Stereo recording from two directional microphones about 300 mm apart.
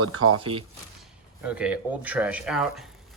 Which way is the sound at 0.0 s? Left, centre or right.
Right.